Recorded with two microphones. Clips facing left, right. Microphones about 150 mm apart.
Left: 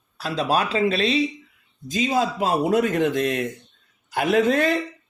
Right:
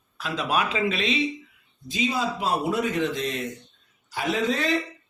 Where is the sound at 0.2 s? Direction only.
35° left (ahead or behind).